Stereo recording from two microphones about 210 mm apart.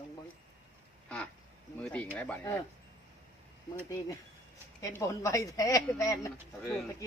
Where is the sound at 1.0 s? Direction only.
5° left (ahead or behind).